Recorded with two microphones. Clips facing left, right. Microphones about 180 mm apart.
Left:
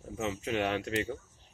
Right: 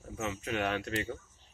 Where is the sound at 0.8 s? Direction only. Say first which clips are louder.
Left 3 dB; 15° left (ahead or behind).